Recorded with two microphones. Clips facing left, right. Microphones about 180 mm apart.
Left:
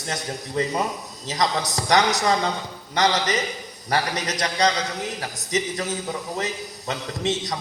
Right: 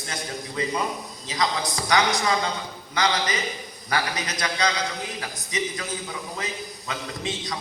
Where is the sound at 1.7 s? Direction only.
40° left (ahead or behind).